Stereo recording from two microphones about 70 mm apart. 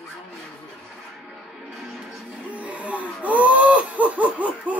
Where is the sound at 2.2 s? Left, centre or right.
Centre.